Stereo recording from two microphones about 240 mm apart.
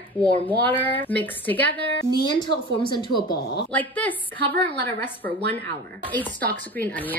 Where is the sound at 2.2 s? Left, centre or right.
Centre.